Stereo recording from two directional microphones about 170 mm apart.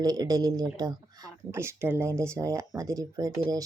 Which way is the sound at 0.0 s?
20° right (ahead or behind).